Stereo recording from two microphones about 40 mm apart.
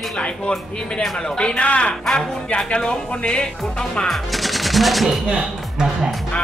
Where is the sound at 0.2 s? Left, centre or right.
Left.